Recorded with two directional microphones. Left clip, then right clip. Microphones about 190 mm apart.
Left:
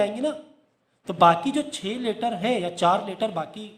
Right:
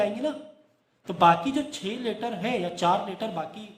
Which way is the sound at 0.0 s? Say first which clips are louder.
Left 2 dB; 35° left (ahead or behind).